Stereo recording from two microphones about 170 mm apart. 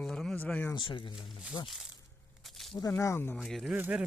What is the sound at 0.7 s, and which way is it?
Speech, 30° left (ahead or behind).